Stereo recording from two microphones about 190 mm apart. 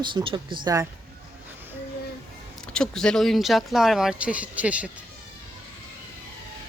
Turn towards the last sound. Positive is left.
turn(degrees=-5)  # may be behind; listen again after turning